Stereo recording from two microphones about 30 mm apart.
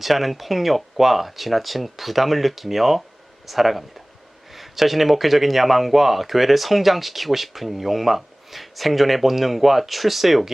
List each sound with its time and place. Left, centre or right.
0.0 s speech: centre